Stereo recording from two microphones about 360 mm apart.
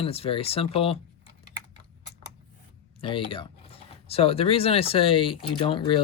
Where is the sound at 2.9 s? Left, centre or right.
Centre.